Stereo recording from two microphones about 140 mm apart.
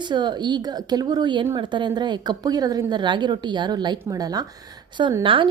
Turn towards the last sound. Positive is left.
turn(degrees=-35)  # may be behind; listen again after turning